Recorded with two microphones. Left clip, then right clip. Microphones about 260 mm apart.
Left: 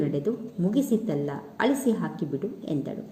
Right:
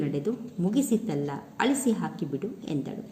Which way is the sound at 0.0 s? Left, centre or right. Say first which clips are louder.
Left 3 dB; centre.